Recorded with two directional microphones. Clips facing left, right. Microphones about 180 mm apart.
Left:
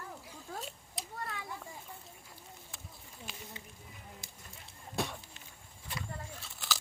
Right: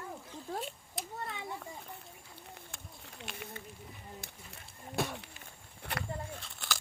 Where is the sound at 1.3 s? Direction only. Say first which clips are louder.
Right 2 dB; 25° right (ahead or behind).